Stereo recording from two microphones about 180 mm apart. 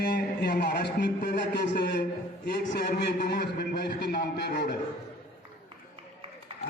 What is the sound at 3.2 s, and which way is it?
A man's voice, 65° left (ahead or behind).